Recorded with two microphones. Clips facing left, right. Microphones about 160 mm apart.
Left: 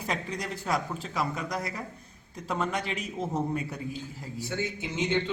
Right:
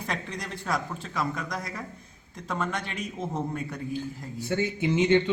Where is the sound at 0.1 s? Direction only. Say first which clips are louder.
Left 2 dB; 10° left (ahead or behind).